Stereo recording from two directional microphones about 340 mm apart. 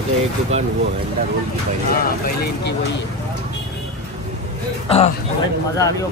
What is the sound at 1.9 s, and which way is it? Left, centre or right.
Speech, left.